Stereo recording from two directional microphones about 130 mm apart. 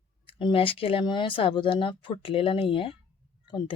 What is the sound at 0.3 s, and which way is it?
Speech, 40° left (ahead or behind).